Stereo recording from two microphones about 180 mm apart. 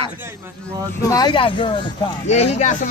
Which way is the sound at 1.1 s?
25° left (ahead or behind).